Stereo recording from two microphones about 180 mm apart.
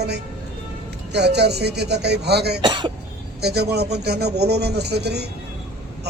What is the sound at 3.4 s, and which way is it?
Speech, 65° right (ahead or behind).